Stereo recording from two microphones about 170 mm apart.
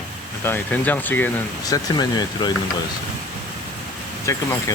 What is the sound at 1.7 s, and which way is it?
Speech, 25° left (ahead or behind).